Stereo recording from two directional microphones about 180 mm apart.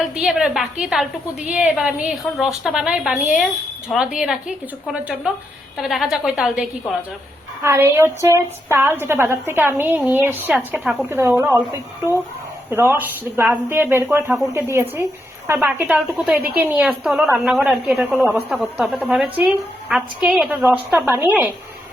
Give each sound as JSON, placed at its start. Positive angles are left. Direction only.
{"t": 0.0, "sound": "a woman's voice", "side_deg": -5}
{"t": 7.6, "sound": "a woman's voice", "side_deg": -15}